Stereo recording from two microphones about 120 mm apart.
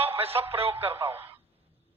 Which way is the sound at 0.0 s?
55° right (ahead or behind).